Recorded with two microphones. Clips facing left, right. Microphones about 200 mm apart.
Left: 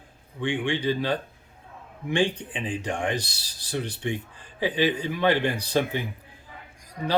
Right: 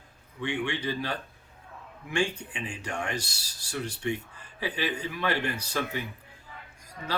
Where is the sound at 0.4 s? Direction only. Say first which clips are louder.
Left 5 dB; 15° left (ahead or behind).